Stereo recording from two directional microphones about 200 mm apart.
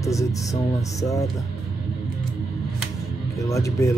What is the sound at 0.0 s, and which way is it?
Speech, 15° left (ahead or behind).